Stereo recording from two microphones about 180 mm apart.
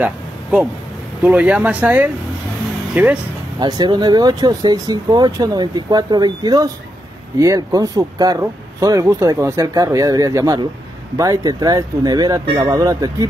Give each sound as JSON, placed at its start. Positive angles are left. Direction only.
{"t": 0.0, "sound": "a sound", "side_deg": -5}
{"t": 1.2, "sound": "speech", "side_deg": -5}
{"t": 3.5, "sound": "speech", "side_deg": -20}